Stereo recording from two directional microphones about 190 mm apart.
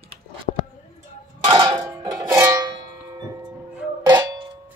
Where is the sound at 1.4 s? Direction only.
25° right (ahead or behind).